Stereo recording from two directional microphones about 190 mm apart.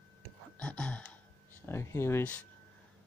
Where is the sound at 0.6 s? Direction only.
5° left (ahead or behind).